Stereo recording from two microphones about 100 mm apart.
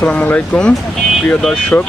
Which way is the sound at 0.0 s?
10° left (ahead or behind).